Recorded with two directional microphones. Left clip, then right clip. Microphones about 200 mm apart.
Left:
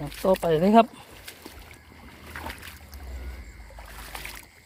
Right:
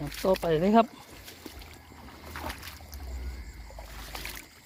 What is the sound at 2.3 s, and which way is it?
Boat, 10° left (ahead or behind).